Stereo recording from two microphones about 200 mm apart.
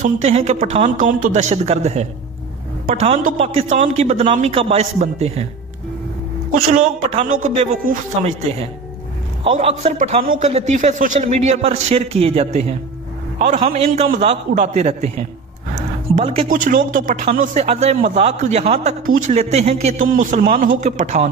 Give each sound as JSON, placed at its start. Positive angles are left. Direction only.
{"t": 0.0, "sound": "a man's voice", "side_deg": -30}
{"t": 6.7, "sound": "a man's voice", "side_deg": -35}
{"t": 16.4, "sound": "a man's voice", "side_deg": -40}